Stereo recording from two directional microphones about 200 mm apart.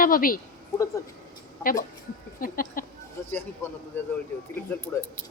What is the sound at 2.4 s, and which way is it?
Speech, 45° left (ahead or behind).